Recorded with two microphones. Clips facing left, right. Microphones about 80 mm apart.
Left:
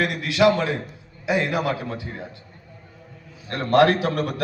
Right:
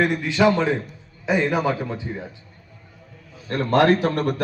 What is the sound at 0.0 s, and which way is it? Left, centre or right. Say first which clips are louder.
Speech: right 3 dB; left.